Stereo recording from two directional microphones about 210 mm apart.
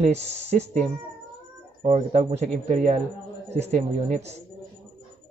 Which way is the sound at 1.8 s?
30° right (ahead or behind).